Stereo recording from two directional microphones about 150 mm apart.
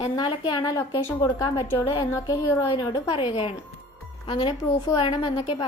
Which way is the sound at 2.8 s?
35° left (ahead or behind).